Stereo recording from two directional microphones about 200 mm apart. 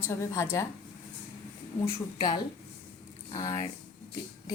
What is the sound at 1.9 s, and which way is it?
A woman's voice, 20° left (ahead or behind).